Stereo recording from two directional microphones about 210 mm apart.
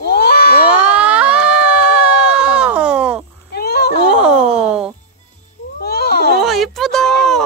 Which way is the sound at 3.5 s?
50° left (ahead or behind).